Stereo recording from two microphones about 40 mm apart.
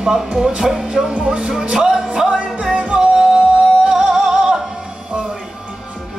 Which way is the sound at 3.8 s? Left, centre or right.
Centre.